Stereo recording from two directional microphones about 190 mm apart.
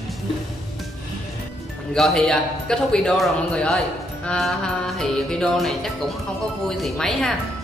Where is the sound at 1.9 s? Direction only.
Centre (ahead or behind).